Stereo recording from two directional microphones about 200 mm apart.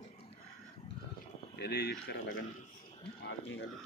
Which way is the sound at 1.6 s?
55° left (ahead or behind).